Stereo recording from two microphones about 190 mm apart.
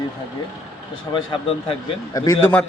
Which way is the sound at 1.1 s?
25° left (ahead or behind).